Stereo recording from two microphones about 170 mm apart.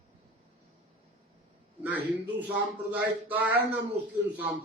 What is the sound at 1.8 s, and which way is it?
Speech, 10° right (ahead or behind).